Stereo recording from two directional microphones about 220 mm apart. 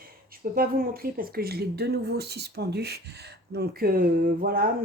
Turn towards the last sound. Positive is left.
turn(degrees=-40)  # may be behind; listen again after turning